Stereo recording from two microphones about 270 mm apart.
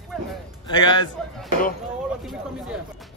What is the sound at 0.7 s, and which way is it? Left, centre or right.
Speech, centre.